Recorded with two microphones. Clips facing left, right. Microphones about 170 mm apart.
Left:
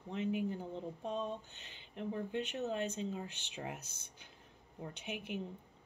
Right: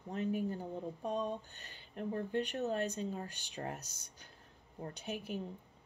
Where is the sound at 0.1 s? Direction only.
40° right (ahead or behind).